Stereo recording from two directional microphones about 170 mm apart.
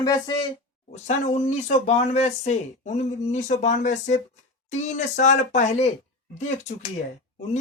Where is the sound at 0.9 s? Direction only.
40° left (ahead or behind).